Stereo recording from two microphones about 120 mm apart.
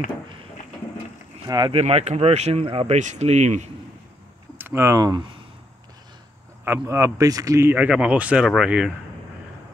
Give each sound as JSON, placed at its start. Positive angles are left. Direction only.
{"t": 1.4, "sound": "speech", "side_deg": -35}
{"t": 1.7, "sound": "speech", "side_deg": -55}
{"t": 2.6, "sound": "speech", "side_deg": -50}
{"t": 3.0, "sound": "speech", "side_deg": -75}
{"t": 4.6, "sound": "speech", "side_deg": -20}
{"t": 6.6, "sound": "speech", "side_deg": -20}
{"t": 7.7, "sound": "speech", "side_deg": -10}